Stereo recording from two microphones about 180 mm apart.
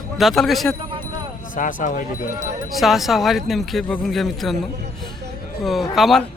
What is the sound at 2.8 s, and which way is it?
Speech, centre (ahead or behind).